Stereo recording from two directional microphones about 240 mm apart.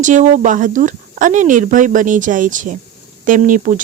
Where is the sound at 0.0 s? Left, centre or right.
Right.